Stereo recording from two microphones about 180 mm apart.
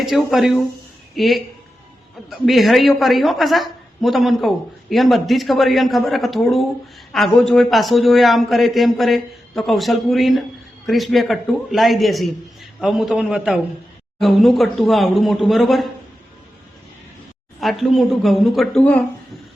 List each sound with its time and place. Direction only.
0.0 s a woman's voice: centre (ahead or behind)
17.6 s a woman's voice: centre (ahead or behind)